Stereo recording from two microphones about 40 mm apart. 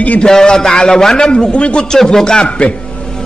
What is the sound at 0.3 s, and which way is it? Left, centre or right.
A man's voice, centre.